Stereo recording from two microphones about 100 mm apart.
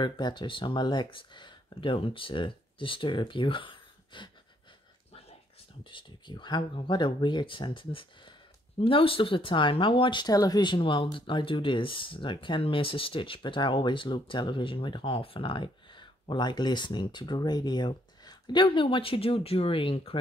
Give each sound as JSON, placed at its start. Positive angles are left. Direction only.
{"t": 0.0, "sound": "speech", "side_deg": 50}
{"t": 5.9, "sound": "speech", "side_deg": 55}
{"t": 10.2, "sound": "speech", "side_deg": 40}